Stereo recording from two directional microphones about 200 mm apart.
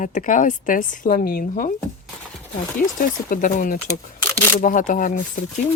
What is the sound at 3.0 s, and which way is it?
Speech, 45° left (ahead or behind).